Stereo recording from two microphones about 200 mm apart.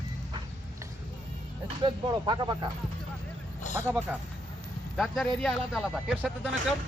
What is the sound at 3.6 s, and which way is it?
Vehicle, 35° left (ahead or behind).